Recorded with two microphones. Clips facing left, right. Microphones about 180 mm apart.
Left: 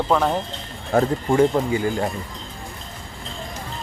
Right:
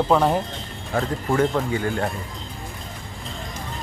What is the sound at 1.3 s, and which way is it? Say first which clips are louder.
Speech: left 3 dB; 15° left (ahead or behind).